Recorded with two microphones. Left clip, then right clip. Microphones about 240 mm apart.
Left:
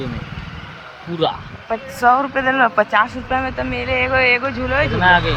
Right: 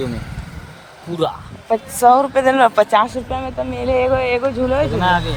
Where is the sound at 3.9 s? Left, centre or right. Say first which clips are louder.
Right 3 dB; right.